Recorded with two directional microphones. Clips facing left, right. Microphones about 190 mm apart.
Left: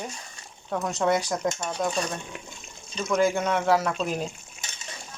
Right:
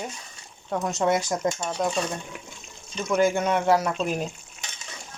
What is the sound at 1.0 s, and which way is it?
Speech, 5° right (ahead or behind).